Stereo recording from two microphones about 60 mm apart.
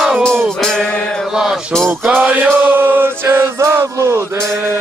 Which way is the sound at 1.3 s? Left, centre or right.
Centre.